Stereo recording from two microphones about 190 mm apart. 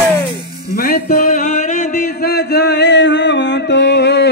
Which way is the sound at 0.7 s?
50° left (ahead or behind).